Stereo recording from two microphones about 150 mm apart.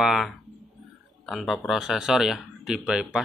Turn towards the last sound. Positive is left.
turn(degrees=-5)  # may be behind; listen again after turning